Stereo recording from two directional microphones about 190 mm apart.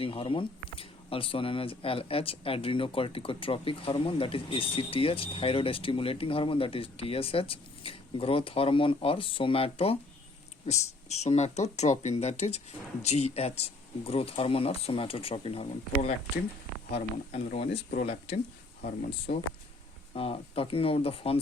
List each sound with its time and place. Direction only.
0.0 s speech: 30° left (ahead or behind)
11.2 s speech: 35° left (ahead or behind)
20.1 s speech: 30° left (ahead or behind)